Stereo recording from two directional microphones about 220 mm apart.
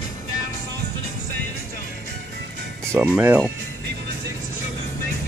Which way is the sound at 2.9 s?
10° right (ahead or behind).